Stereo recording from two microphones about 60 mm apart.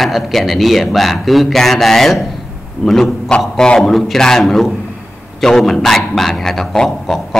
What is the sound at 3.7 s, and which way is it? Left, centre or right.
A man's voice, centre.